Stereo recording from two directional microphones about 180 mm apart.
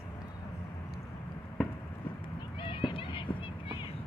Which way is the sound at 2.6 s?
30° left (ahead or behind).